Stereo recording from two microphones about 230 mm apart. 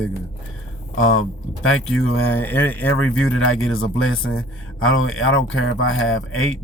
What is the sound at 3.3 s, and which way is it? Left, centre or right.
A man's voice, left.